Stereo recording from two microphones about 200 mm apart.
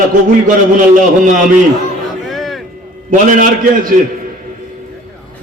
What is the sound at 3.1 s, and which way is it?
Speech, 40° right (ahead or behind).